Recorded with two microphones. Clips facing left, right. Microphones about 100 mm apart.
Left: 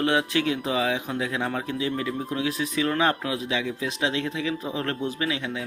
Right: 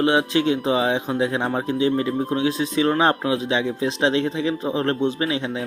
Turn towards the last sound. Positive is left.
turn(degrees=-30)  # may be behind; listen again after turning